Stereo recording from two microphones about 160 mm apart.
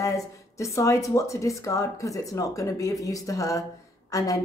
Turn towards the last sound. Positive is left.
turn(degrees=20)  # may be behind; listen again after turning